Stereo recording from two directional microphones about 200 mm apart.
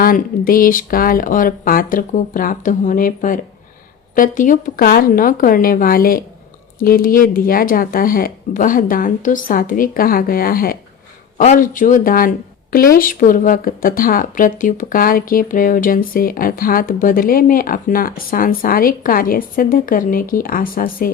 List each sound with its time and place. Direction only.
0.0 s speech: 45° left (ahead or behind)